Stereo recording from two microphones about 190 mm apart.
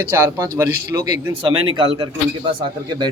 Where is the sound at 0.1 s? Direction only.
15° right (ahead or behind).